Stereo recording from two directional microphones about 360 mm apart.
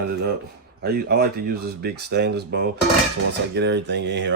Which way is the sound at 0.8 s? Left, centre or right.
Right.